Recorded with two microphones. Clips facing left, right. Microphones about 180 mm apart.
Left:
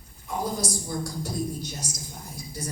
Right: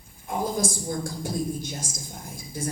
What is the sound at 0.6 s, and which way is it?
A man's voice, 50° right (ahead or behind).